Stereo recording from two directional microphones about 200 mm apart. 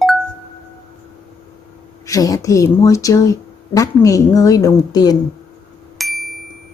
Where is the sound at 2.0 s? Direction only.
15° left (ahead or behind).